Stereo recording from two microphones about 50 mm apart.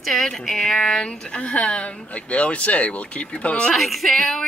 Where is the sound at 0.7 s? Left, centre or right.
Centre.